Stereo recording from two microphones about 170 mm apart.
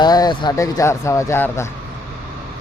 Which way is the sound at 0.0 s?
25° left (ahead or behind).